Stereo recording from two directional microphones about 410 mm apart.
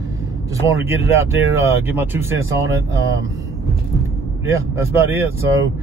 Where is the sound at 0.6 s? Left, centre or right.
Centre.